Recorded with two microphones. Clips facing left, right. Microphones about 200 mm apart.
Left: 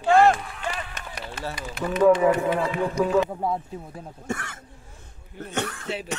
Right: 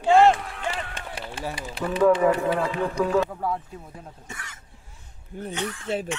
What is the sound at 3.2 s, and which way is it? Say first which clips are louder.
Speech: left 1 dB; 25° left (ahead or behind).